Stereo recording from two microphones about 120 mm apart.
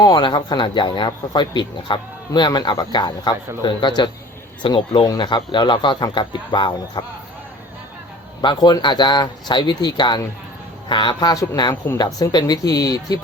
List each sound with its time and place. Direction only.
0.0 s speech: 35° left (ahead or behind)
8.4 s speech: 40° left (ahead or behind)